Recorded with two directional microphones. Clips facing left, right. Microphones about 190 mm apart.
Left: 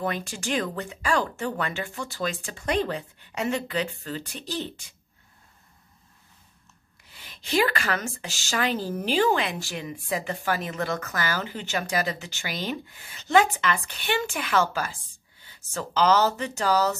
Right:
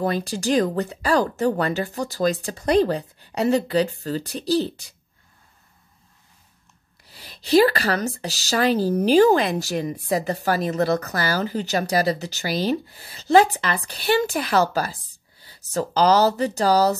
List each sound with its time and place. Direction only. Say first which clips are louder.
0.0 s speech: right 6 dB; 35° right (ahead or behind)
7.1 s speech: right 9 dB; 35° right (ahead or behind)